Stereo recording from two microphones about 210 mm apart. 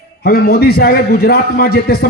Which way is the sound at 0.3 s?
45° left (ahead or behind).